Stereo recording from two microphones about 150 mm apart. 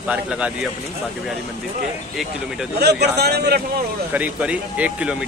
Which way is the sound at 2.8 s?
90° right.